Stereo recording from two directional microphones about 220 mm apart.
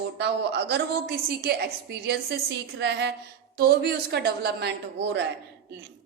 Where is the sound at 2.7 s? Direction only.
50° right (ahead or behind).